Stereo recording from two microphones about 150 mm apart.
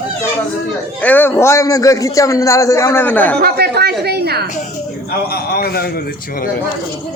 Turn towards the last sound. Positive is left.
turn(degrees=90)